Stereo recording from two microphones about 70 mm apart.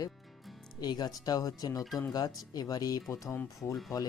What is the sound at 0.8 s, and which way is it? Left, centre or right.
Speech, left.